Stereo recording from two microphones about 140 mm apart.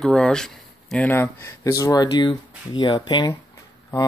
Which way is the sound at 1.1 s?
20° left (ahead or behind).